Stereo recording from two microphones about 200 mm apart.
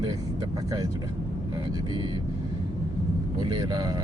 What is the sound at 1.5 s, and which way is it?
Speech, 20° right (ahead or behind).